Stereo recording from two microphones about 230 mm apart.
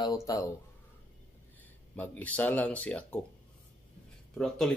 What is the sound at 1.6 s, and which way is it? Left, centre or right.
Speech, centre.